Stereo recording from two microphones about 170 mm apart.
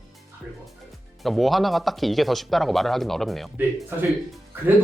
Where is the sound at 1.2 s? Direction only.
Centre (ahead or behind).